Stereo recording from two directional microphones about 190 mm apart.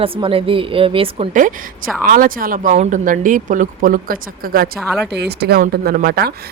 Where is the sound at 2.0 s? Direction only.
45° right (ahead or behind).